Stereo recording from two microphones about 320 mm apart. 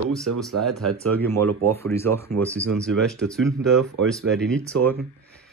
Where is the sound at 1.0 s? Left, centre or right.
Centre.